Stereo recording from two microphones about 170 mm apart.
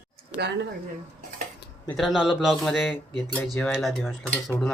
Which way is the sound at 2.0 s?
Centre (ahead or behind).